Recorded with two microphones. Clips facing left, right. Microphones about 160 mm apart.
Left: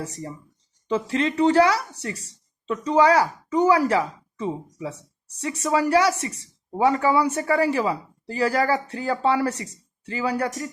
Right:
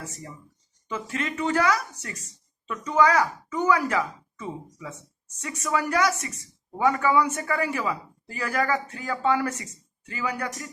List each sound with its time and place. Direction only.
0.0 s speech: 35° left (ahead or behind)